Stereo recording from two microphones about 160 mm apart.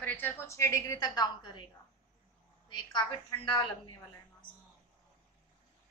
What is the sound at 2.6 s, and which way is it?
A woman's voice, 30° left (ahead or behind).